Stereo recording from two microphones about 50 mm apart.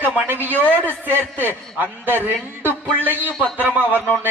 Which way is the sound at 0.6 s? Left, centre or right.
Left.